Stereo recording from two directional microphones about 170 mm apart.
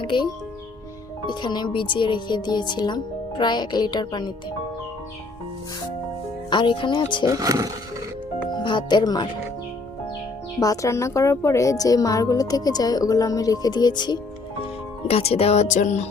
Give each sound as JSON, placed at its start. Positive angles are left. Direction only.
{"t": 0.0, "sound": "a woman's voice", "side_deg": 30}
{"t": 1.3, "sound": "a woman's voice", "side_deg": 25}
{"t": 6.5, "sound": "a woman's voice", "side_deg": 30}
{"t": 7.3, "sound": "speech", "side_deg": -20}
{"t": 8.4, "sound": "speech", "side_deg": 25}
{"t": 10.6, "sound": "a woman's voice", "side_deg": 20}
{"t": 15.0, "sound": "speech", "side_deg": 35}